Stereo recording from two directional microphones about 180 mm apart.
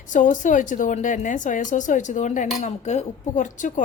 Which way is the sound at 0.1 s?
45° left (ahead or behind).